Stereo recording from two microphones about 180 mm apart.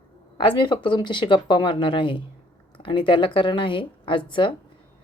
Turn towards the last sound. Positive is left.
turn(degrees=25)  # may be behind; listen again after turning